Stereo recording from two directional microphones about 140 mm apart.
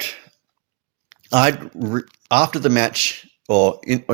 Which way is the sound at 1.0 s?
40° right (ahead or behind).